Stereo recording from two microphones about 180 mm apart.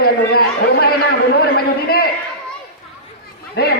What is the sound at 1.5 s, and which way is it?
Speech, 60° left (ahead or behind).